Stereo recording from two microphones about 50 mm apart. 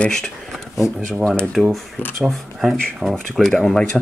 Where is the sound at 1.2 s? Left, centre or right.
Centre.